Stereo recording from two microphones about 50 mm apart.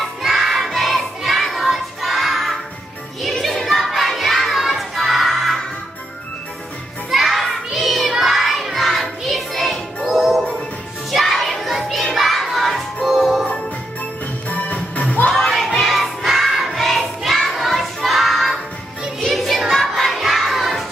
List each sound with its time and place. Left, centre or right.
0.2 s choir: centre
3.2 s crowd: centre
7.1 s a sound: centre
8.1 s child singing: centre
8.7 s music: centre
11.1 s children shouting: centre
14.5 s music: left
15.3 s choir: centre
19.2 s music: centre
20.1 s crowd: centre